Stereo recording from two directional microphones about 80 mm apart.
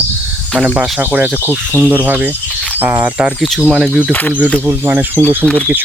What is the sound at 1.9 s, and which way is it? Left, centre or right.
Speech, right.